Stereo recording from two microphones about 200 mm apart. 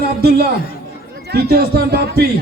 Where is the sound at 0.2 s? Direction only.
50° right (ahead or behind).